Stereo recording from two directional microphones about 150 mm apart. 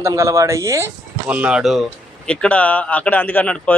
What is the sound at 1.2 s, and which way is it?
Speech, 10° right (ahead or behind).